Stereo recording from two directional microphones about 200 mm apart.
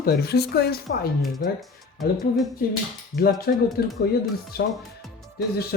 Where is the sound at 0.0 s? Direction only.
50° left (ahead or behind).